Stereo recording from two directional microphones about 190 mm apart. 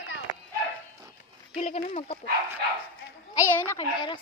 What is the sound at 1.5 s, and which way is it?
Speech, 35° left (ahead or behind).